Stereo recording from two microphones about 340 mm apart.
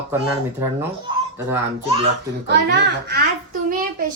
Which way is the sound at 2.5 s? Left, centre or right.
Right.